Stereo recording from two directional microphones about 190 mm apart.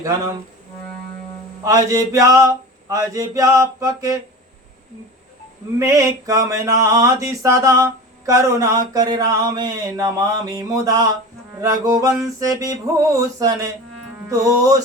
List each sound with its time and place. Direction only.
0.0 s mantra: 15° right (ahead or behind)
1.6 s mantra: 20° right (ahead or behind)
5.8 s mantra: 15° right (ahead or behind)